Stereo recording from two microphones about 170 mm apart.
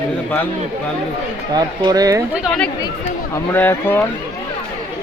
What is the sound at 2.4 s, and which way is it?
Speech, centre (ahead or behind).